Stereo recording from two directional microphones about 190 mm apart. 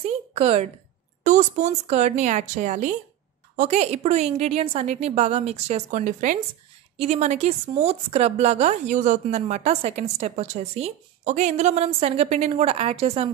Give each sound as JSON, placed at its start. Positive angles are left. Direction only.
{"t": 0.3, "sound": "a woman's voice", "side_deg": -30}